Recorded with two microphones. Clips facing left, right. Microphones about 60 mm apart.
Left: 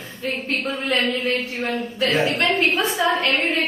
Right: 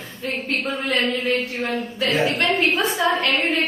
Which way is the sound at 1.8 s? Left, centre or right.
Left.